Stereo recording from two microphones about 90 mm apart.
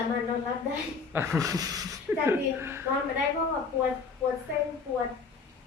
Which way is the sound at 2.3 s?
30° right (ahead or behind).